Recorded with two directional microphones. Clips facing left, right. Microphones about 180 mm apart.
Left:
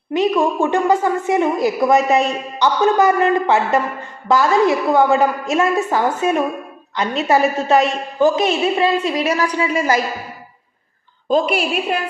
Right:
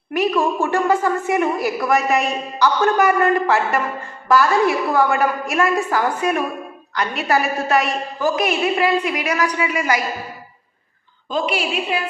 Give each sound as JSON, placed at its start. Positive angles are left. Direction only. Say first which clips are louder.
{"t": 0.1, "sound": "a woman's voice", "louder": "left 2 dB", "side_deg": 20}
{"t": 11.3, "sound": "a woman's voice", "louder": "left 5 dB", "side_deg": 50}